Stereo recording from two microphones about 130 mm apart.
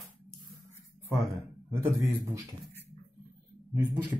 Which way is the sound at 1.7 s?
25° right (ahead or behind).